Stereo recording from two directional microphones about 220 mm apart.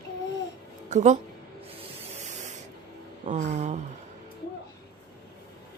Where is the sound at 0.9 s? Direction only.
30° right (ahead or behind).